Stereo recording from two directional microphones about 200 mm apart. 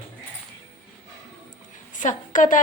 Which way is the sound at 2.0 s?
40° left (ahead or behind).